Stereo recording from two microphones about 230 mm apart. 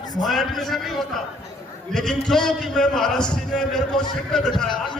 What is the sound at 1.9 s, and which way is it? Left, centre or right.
A man's voice, centre.